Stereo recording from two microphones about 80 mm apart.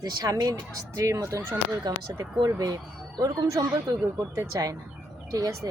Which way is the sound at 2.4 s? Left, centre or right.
Right.